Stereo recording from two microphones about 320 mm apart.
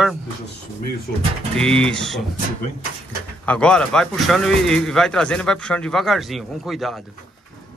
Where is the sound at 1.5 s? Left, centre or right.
Centre.